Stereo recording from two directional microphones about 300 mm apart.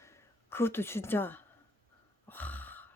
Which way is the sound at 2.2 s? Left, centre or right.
Centre.